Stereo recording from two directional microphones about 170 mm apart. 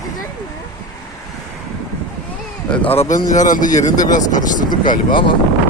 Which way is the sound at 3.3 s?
50° left (ahead or behind).